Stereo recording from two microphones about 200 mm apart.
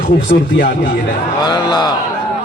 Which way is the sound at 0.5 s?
50° left (ahead or behind).